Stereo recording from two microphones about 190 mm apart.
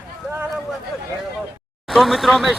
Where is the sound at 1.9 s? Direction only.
Centre (ahead or behind).